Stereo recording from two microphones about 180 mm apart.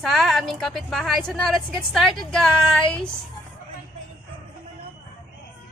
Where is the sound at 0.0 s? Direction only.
Centre (ahead or behind).